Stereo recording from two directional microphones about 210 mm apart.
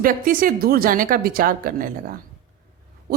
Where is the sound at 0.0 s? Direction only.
40° right (ahead or behind).